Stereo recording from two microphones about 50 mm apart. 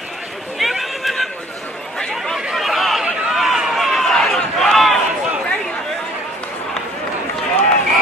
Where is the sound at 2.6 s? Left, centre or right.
Centre.